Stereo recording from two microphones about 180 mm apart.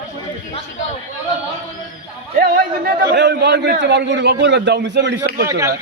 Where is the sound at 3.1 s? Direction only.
70° right (ahead or behind).